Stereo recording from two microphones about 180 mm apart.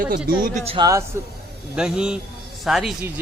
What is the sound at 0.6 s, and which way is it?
Speech, 25° right (ahead or behind).